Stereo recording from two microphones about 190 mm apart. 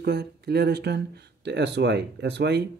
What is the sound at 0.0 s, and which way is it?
Speech, 60° right (ahead or behind).